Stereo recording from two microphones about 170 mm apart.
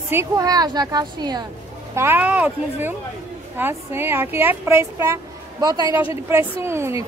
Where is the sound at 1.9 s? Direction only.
10° right (ahead or behind).